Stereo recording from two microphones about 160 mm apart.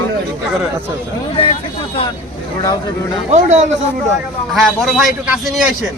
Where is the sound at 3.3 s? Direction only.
45° right (ahead or behind).